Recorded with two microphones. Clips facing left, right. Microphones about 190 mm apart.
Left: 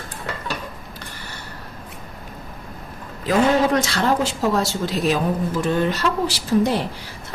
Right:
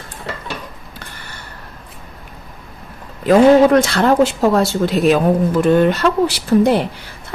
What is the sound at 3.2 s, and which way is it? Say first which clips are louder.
Speech: right 9 dB; 55° right (ahead or behind).